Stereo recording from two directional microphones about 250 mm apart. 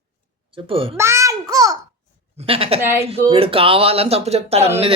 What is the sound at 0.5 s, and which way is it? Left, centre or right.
Speech, right.